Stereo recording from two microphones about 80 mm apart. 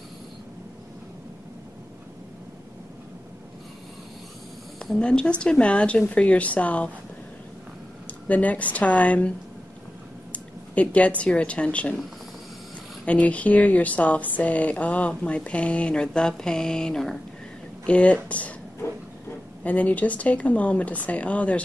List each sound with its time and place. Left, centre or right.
4.7 s speech: centre
8.3 s a woman's voice: centre
10.3 s speech: centre
13.0 s speech: centre
19.6 s speech: centre